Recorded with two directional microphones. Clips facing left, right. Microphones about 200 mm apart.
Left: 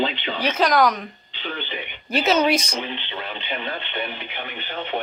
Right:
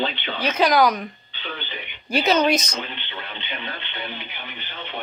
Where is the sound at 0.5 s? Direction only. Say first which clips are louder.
Right 1 dB; centre (ahead or behind).